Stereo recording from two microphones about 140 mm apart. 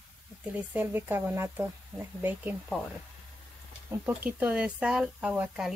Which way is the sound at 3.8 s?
15° right (ahead or behind).